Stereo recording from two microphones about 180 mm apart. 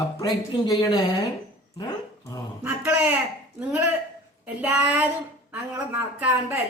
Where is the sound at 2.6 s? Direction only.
10° right (ahead or behind).